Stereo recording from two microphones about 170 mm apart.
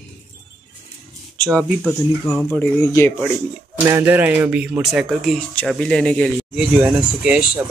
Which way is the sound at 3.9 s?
15° right (ahead or behind).